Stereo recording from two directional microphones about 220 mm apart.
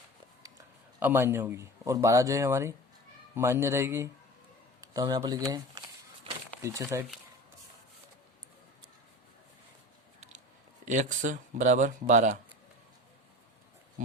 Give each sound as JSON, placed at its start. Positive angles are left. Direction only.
{"t": 0.9, "sound": "speech", "side_deg": -10}
{"t": 10.8, "sound": "speech", "side_deg": -35}